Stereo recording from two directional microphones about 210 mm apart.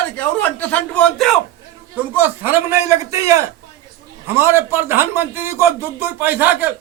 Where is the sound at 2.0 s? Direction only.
10° right (ahead or behind).